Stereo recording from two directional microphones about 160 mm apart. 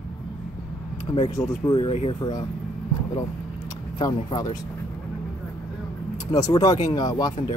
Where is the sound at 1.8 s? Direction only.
40° left (ahead or behind).